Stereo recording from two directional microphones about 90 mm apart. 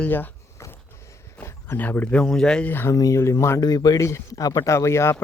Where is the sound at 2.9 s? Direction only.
35° left (ahead or behind).